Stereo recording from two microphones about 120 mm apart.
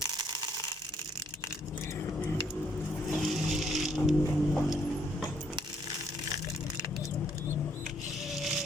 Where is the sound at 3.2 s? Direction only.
Centre (ahead or behind).